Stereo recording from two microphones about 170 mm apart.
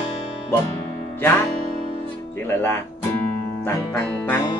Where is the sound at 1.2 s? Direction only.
15° left (ahead or behind).